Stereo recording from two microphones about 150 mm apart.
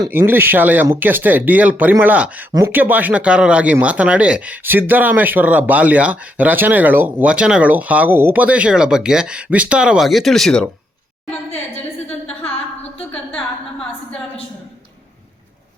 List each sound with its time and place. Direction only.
0.1 s speech: 15° right (ahead or behind)
2.5 s speech: 25° right (ahead or behind)
2.7 s speech: 10° right (ahead or behind); by 10.7 s 5° left (ahead or behind)